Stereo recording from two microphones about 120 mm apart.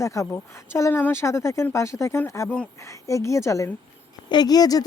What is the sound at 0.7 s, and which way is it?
Speech, 20° left (ahead or behind).